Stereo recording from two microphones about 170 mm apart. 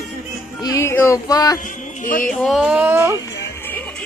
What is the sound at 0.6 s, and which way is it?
Speech, 20° left (ahead or behind).